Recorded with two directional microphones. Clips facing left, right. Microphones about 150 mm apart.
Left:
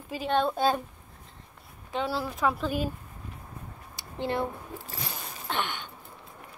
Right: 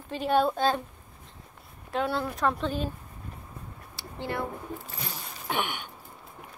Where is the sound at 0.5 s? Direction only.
10° left (ahead or behind).